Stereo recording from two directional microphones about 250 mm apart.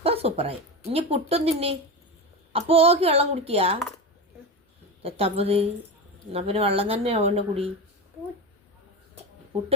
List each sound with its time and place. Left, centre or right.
0.0 s a woman's voice: right
5.0 s speech: right